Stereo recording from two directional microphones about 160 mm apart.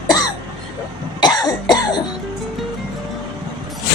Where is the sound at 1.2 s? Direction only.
25° left (ahead or behind).